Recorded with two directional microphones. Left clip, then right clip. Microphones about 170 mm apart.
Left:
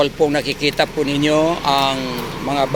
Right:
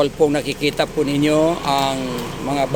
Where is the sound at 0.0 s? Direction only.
20° right (ahead or behind).